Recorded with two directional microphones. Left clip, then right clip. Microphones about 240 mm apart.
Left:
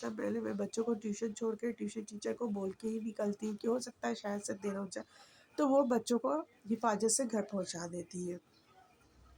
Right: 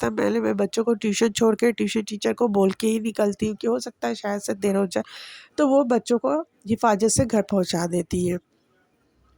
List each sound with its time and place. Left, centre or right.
0.0 s speech: right